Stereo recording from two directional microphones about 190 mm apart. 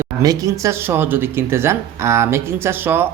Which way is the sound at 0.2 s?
20° right (ahead or behind).